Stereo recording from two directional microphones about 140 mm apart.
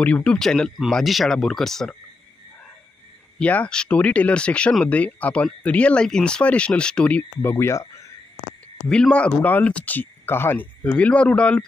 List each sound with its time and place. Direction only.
0.0 s speech: 10° left (ahead or behind)
3.3 s speech: 10° left (ahead or behind)
8.8 s speech: 5° left (ahead or behind)